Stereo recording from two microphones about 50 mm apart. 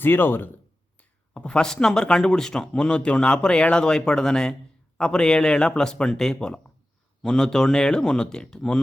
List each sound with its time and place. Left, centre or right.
0.0 s speech: left
0.9 s whispering: left
1.5 s speech: centre